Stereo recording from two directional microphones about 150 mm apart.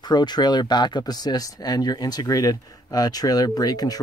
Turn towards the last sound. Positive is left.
turn(degrees=25)  # may be behind; listen again after turning